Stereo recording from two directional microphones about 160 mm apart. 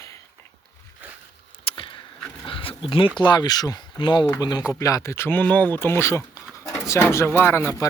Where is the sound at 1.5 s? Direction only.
35° left (ahead or behind).